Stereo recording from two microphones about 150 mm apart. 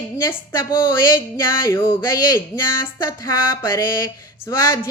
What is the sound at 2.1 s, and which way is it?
Music, 25° left (ahead or behind).